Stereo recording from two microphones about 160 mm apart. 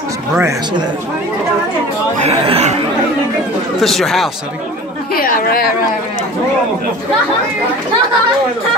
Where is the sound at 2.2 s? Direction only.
40° right (ahead or behind).